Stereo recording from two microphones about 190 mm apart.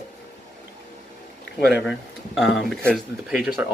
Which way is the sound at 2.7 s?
Centre (ahead or behind).